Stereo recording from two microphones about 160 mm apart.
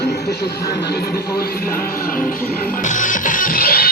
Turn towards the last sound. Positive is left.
turn(degrees=65)  # may be behind; listen again after turning